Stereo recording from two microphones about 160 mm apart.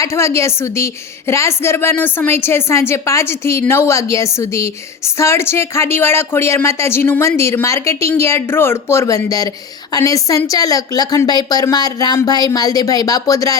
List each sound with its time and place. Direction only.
0.0 s a woman's voice: 20° left (ahead or behind)